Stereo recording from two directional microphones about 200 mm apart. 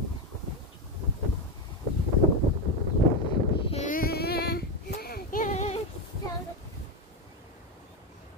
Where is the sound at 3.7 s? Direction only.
40° left (ahead or behind).